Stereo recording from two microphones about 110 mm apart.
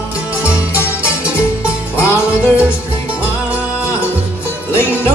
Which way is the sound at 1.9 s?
20° left (ahead or behind).